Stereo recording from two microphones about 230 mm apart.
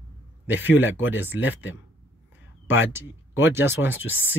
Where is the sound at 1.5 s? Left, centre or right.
Left.